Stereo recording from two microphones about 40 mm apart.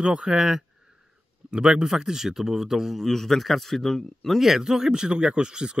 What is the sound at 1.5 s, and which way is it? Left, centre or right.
Speech, right.